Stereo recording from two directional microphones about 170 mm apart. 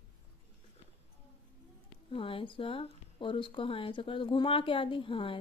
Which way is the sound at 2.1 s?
30° left (ahead or behind).